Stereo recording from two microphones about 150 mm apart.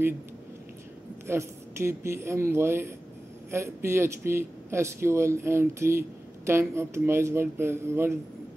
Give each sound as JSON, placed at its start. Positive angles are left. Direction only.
{"t": 1.2, "sound": "speech", "side_deg": -15}